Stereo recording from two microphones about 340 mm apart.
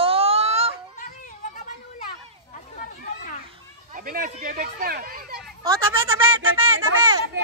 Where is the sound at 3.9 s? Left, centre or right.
Right.